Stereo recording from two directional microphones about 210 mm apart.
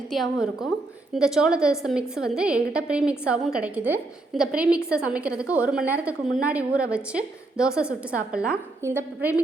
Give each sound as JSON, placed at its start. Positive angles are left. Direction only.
{"t": 0.1, "sound": "a woman's voice", "side_deg": 0}